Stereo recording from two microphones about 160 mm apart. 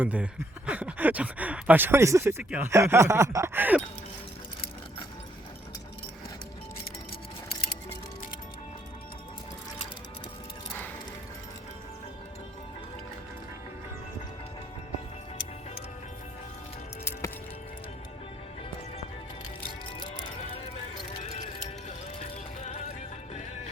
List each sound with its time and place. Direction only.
0.0 s speech: 10° right (ahead or behind)
21.2 s music: 45° left (ahead or behind)